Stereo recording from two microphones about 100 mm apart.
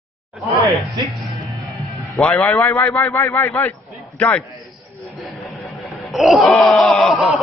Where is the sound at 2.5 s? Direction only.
25° left (ahead or behind).